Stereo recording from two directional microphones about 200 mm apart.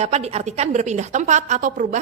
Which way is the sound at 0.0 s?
35° right (ahead or behind).